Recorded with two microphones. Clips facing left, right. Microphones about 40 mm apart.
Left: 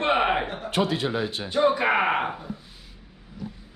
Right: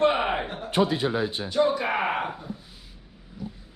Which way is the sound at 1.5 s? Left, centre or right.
Left.